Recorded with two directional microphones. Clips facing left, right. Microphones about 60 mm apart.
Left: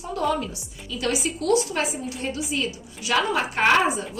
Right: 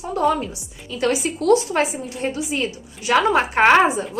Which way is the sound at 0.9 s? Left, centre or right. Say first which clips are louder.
Right 5 dB; right.